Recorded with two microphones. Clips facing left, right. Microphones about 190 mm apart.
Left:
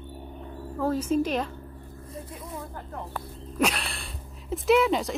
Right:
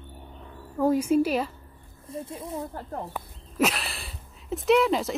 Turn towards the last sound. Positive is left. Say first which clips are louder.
# even
turn(degrees=0)  # may be behind; listen again after turning